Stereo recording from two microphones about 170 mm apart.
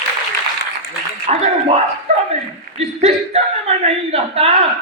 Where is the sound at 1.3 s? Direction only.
40° right (ahead or behind).